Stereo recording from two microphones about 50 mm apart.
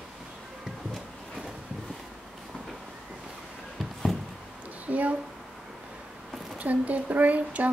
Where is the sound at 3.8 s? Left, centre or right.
Centre.